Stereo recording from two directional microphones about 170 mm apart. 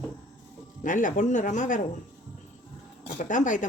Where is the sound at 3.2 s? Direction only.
50° left (ahead or behind).